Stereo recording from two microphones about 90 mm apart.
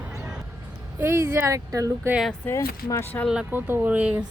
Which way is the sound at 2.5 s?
35° left (ahead or behind).